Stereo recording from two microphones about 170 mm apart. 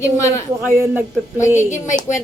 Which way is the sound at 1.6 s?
45° left (ahead or behind).